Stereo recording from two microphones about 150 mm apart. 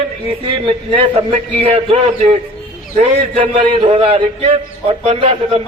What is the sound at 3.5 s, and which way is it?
A man's voice, 35° right (ahead or behind).